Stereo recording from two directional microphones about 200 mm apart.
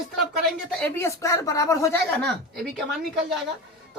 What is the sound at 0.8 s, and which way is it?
A woman's voice, 10° left (ahead or behind).